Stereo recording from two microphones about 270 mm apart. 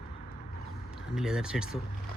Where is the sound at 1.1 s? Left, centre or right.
Centre.